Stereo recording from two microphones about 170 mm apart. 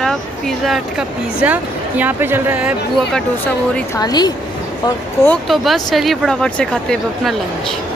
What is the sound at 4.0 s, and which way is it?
Speech, 25° left (ahead or behind).